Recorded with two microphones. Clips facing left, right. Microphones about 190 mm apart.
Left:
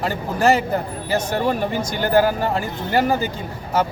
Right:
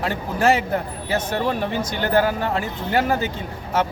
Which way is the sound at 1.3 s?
5° left (ahead or behind).